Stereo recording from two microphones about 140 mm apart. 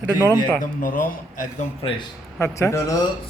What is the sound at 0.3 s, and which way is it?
A man's voice, 80° left.